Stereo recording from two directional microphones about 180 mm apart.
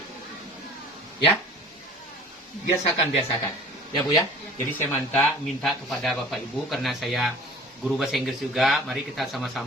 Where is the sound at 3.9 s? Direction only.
20° left (ahead or behind).